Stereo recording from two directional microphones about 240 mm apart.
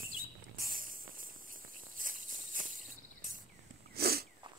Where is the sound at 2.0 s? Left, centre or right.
Right.